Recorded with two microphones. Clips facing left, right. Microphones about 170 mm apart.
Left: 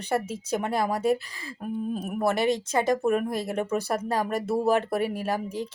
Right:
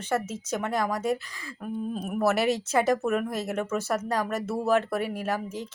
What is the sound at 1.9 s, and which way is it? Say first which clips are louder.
Speech: right 2 dB; 5° left (ahead or behind).